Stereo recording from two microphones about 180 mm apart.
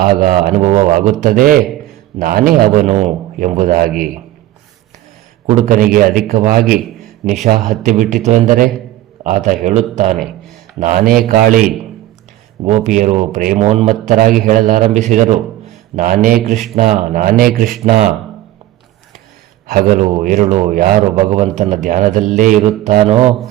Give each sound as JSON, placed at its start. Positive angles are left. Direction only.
{"t": 0.0, "sound": "a man's voice", "side_deg": -45}
{"t": 2.8, "sound": "a sound", "side_deg": -35}
{"t": 3.3, "sound": "a man's voice", "side_deg": -45}
{"t": 5.5, "sound": "a man's voice", "side_deg": -45}
{"t": 7.6, "sound": "speech", "side_deg": 0}
{"t": 8.1, "sound": "a man's voice", "side_deg": -45}
{"t": 9.6, "sound": "a sound", "side_deg": -40}
{"t": 10.8, "sound": "a man's voice", "side_deg": -50}
{"t": 12.6, "sound": "a sound", "side_deg": -40}
{"t": 13.0, "sound": "a man's voice", "side_deg": -40}
{"t": 19.6, "sound": "a man's voice", "side_deg": -50}
{"t": 22.8, "sound": "a sound", "side_deg": -40}